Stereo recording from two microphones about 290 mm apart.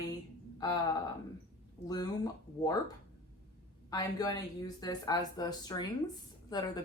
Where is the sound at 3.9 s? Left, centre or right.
Centre.